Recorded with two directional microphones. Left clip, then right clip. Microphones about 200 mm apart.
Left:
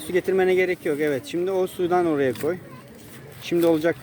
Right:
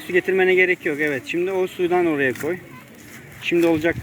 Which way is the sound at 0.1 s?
5° left (ahead or behind).